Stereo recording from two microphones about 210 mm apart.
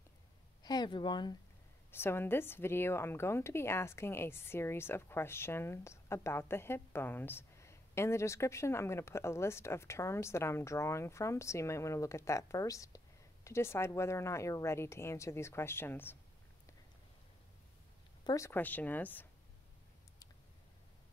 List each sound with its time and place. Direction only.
0.7 s speech: 20° left (ahead or behind)
18.2 s speech: 15° left (ahead or behind)